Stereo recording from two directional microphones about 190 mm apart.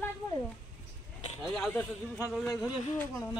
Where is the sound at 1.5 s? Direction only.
5° left (ahead or behind).